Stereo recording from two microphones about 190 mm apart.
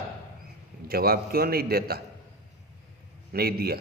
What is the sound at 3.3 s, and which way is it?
Speech, 55° right (ahead or behind).